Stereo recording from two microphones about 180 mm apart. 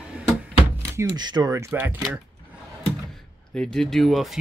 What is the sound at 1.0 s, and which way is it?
Speech, 25° right (ahead or behind).